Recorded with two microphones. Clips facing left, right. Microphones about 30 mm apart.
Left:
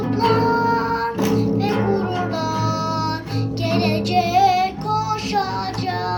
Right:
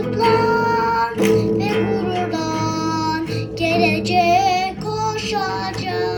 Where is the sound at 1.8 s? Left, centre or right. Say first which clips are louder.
Right 1 dB; right.